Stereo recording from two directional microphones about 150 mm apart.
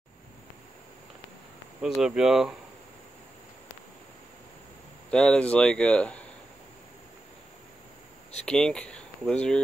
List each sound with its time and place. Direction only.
2.0 s speech: 5° right (ahead or behind)
5.1 s speech: 5° left (ahead or behind)
8.5 s speech: 5° left (ahead or behind)